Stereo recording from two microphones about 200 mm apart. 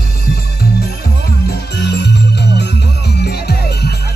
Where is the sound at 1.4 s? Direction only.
55° left (ahead or behind).